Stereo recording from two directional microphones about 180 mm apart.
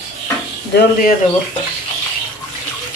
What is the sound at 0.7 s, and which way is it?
Speech, 50° left (ahead or behind).